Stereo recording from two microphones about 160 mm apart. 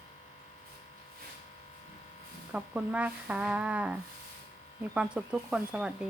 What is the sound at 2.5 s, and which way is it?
Speech, 5° right (ahead or behind).